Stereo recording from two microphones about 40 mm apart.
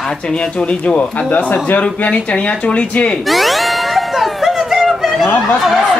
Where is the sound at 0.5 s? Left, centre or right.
Left.